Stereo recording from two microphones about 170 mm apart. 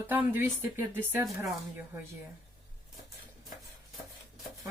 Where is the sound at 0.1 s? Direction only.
10° right (ahead or behind).